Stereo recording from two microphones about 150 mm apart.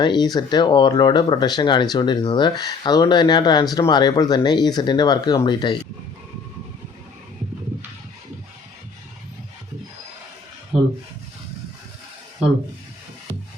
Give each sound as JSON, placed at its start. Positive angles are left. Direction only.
{"t": 0.0, "sound": "speech", "side_deg": 30}